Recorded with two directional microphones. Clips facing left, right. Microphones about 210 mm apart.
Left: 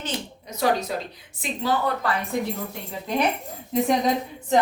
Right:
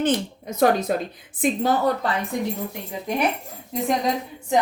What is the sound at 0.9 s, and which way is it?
Speech, 50° right (ahead or behind).